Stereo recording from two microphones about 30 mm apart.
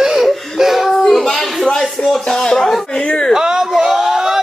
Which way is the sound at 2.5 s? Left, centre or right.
Centre.